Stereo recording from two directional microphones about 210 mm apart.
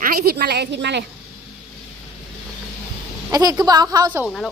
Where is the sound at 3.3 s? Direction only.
15° right (ahead or behind).